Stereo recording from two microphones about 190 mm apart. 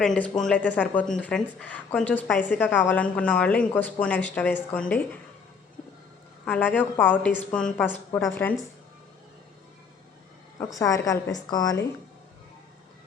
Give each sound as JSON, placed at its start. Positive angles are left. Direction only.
{"t": 0.0, "sound": "speech", "side_deg": 5}
{"t": 6.4, "sound": "speech", "side_deg": 5}
{"t": 10.8, "sound": "a woman's voice", "side_deg": 15}